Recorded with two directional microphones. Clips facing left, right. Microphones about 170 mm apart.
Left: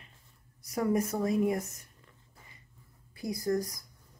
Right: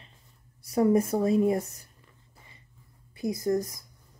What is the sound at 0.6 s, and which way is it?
Speech, 30° right (ahead or behind).